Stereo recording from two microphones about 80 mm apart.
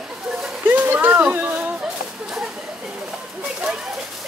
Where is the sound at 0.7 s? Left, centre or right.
Right.